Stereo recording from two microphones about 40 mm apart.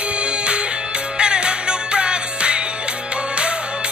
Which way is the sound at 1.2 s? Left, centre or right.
Right.